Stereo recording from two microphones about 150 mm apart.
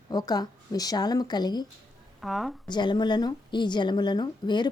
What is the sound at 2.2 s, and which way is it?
Speech, centre (ahead or behind).